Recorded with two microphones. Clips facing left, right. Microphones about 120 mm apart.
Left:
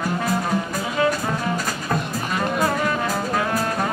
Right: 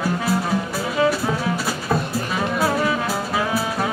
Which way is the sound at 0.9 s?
5° right (ahead or behind).